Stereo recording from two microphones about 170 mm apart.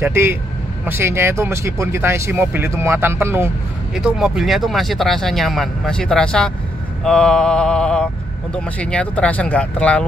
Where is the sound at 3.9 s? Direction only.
5° right (ahead or behind).